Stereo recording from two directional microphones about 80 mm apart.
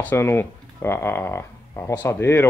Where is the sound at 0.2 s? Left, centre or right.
Left.